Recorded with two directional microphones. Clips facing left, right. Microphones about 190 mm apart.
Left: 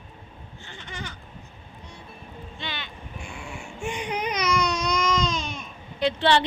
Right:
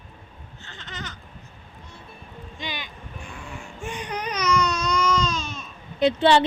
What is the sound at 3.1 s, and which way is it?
Baby cry, 15° left (ahead or behind).